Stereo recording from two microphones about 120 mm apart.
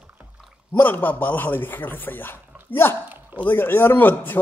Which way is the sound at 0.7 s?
15° left (ahead or behind).